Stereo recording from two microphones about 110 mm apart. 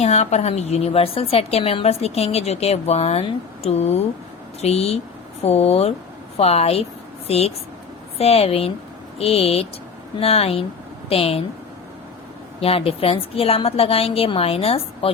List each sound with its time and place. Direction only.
0.0 s a woman's voice: 85° left; by 11.4 s 60° left (ahead or behind)
12.5 s a woman's voice: 60° left (ahead or behind)